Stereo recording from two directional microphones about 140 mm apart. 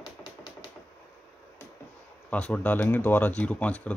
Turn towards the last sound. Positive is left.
turn(degrees=10)  # may be behind; listen again after turning